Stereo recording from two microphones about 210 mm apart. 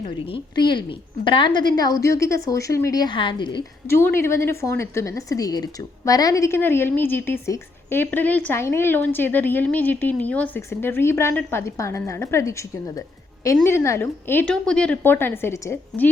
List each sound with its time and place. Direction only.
0.3 s a woman's voice: 20° left (ahead or behind)
3.9 s a woman's voice: 10° left (ahead or behind)